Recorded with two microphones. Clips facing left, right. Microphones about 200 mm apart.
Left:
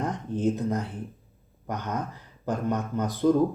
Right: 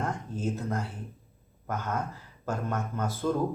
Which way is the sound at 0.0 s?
20° left (ahead or behind).